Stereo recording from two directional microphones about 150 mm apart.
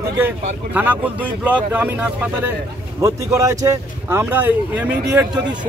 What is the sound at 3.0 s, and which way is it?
Speech, 20° right (ahead or behind).